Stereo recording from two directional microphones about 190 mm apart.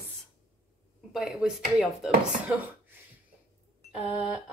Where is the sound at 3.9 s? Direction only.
5° right (ahead or behind).